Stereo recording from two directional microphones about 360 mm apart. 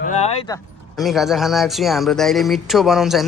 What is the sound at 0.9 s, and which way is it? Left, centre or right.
Speech, centre.